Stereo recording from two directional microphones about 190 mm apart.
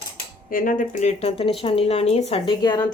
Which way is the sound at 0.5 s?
45° left (ahead or behind).